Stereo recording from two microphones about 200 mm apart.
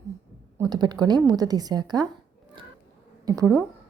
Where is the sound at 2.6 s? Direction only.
25° right (ahead or behind).